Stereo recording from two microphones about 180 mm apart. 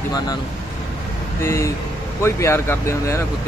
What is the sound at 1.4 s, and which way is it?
Speech, 15° left (ahead or behind).